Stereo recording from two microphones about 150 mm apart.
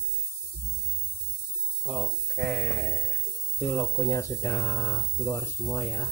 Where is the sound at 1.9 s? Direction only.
5° left (ahead or behind).